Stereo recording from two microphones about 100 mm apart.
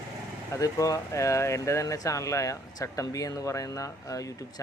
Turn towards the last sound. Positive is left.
turn(degrees=35)  # may be behind; listen again after turning